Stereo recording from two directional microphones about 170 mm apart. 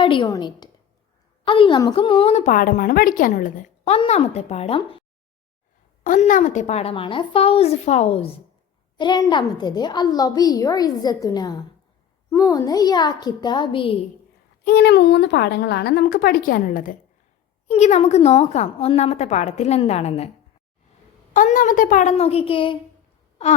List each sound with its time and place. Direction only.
0.0 s a woman's voice: 30° left (ahead or behind); by 3.9 s 50° left (ahead or behind)
3.9 s a woman's voice: 35° left (ahead or behind)
6.0 s a woman's voice: 50° left (ahead or behind)
9.0 s a woman's voice: 25° left (ahead or behind)
14.6 s speech: 75° left (ahead or behind); by 17.0 s 50° left (ahead or behind)
17.7 s a woman's voice: 40° left (ahead or behind)
21.3 s speech: 50° left (ahead or behind); by 22.8 s 30° left (ahead or behind)